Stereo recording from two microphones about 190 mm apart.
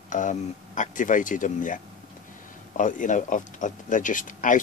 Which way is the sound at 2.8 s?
45° left (ahead or behind).